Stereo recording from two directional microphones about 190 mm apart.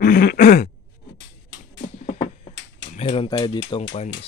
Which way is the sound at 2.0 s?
35° left (ahead or behind).